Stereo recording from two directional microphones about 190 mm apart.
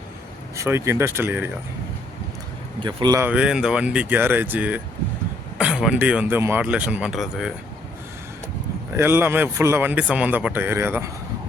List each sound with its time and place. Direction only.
0.5 s a man's voice: 15° right (ahead or behind)
2.8 s speech: 20° right (ahead or behind)
3.2 s a man's voice: 5° right (ahead or behind)
9.0 s a man's voice: 10° right (ahead or behind)